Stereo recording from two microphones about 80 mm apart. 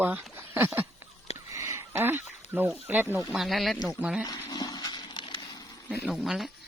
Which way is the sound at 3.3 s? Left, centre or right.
Centre.